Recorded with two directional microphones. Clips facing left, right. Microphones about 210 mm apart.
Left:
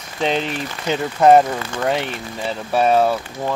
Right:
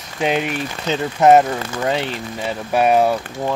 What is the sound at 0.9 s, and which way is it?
Speech, 10° left (ahead or behind).